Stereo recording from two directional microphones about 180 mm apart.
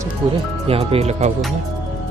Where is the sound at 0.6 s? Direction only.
35° right (ahead or behind).